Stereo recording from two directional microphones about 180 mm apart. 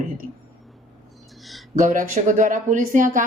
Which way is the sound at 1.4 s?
Centre (ahead or behind).